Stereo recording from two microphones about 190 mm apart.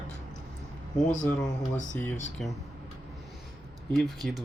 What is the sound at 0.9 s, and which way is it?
Speech, 40° left (ahead or behind).